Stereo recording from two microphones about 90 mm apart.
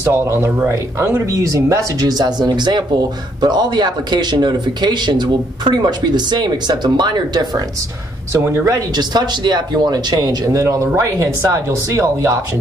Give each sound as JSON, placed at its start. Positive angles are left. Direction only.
{"t": 0.0, "sound": "speech", "side_deg": -25}
{"t": 8.9, "sound": "speech", "side_deg": -50}